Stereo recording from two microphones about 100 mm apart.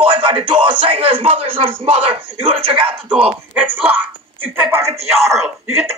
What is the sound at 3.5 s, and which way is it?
Speech, 15° right (ahead or behind).